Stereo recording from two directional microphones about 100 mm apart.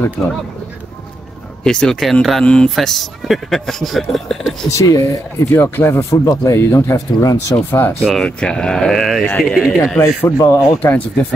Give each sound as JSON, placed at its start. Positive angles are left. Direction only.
{"t": 1.6, "sound": "a man's voice", "side_deg": 10}
{"t": 4.6, "sound": "speech", "side_deg": 35}
{"t": 5.5, "sound": "speech", "side_deg": 25}
{"t": 8.0, "sound": "a man's voice", "side_deg": 5}
{"t": 9.9, "sound": "speech", "side_deg": 30}